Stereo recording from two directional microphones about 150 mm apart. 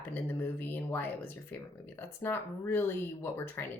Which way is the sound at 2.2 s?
15° left (ahead or behind).